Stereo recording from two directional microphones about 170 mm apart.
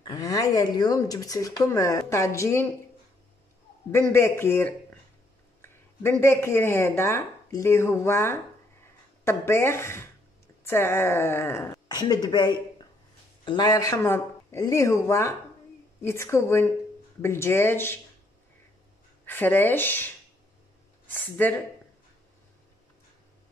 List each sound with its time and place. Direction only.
0.0 s a woman's voice: 25° left (ahead or behind)
3.9 s a woman's voice: 15° left (ahead or behind)
19.2 s a woman's voice: 10° left (ahead or behind)
21.1 s a woman's voice: 10° left (ahead or behind)